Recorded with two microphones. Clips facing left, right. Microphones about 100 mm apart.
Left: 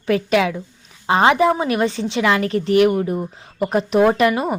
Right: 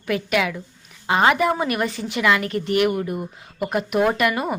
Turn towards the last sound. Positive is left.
turn(degrees=25)  # may be behind; listen again after turning